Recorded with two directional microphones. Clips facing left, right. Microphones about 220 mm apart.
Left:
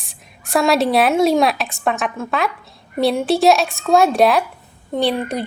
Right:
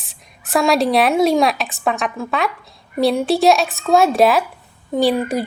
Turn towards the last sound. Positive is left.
turn(degrees=-5)  # may be behind; listen again after turning